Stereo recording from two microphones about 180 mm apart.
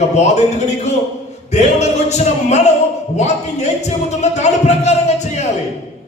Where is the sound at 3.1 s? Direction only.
40° left (ahead or behind).